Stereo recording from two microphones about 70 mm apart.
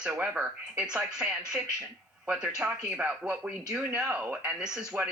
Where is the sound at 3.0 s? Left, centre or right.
Right.